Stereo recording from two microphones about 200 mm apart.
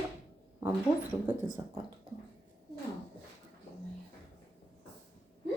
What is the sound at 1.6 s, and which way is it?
Speech, 20° right (ahead or behind).